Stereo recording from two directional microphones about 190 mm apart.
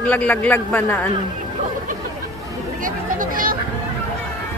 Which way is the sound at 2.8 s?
45° right (ahead or behind).